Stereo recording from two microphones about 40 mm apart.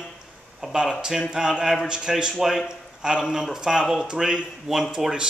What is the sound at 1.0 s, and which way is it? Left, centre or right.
A man's voice, centre.